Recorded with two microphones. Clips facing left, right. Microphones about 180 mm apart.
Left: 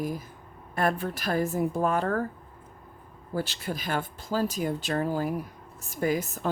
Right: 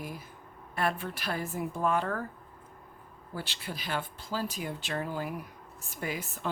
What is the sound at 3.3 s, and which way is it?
Speech, 45° left (ahead or behind).